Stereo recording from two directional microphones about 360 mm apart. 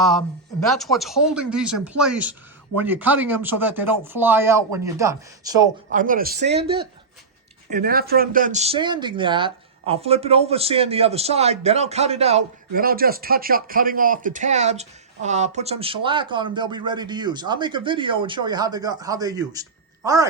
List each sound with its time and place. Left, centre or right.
0.7 s speech: centre
5.9 s speech: right